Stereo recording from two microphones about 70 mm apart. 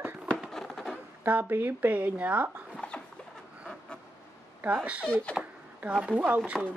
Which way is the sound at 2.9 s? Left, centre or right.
Centre.